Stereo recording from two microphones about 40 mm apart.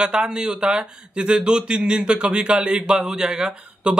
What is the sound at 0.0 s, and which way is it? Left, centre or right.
Speech, centre.